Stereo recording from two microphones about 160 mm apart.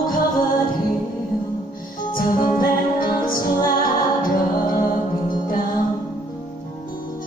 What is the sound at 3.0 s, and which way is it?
Music, 60° left (ahead or behind).